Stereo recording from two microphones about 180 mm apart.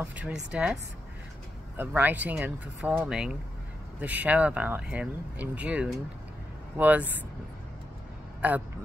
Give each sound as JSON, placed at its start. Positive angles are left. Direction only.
{"t": 0.0, "sound": "speech", "side_deg": -5}
{"t": 1.8, "sound": "speech", "side_deg": -10}
{"t": 8.4, "sound": "speech", "side_deg": -10}